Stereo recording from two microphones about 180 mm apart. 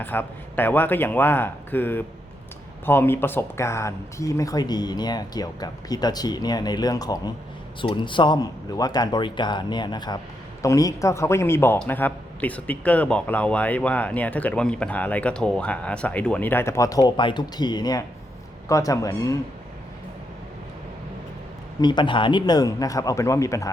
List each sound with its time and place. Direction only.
0.0 s a man's voice: 10° left (ahead or behind)
21.8 s speech: 25° left (ahead or behind)